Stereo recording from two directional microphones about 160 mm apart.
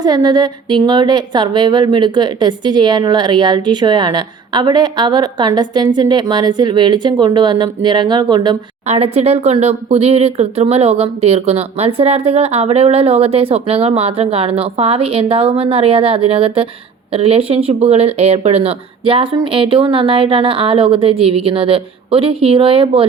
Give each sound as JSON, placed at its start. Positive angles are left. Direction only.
{"t": 0.0, "sound": "a woman's voice", "side_deg": -25}
{"t": 8.9, "sound": "speech", "side_deg": -40}